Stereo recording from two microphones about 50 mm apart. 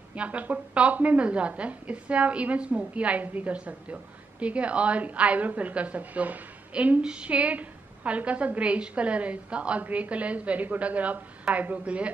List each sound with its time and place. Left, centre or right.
0.1 s a woman's voice: right